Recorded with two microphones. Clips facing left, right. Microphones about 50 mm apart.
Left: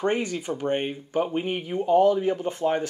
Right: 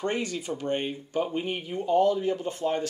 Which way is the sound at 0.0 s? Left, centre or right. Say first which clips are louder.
Left 4 dB; left.